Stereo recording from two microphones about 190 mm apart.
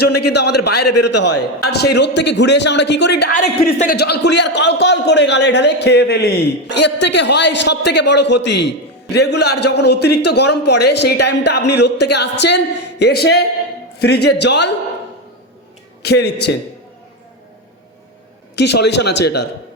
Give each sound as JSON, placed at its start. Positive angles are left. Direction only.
{"t": 0.0, "sound": "a man's voice", "side_deg": 60}
{"t": 3.7, "sound": "a man's voice", "side_deg": 40}
{"t": 3.9, "sound": "a man's voice", "side_deg": 60}
{"t": 16.0, "sound": "a man's voice", "side_deg": 60}
{"t": 18.5, "sound": "a man's voice", "side_deg": 60}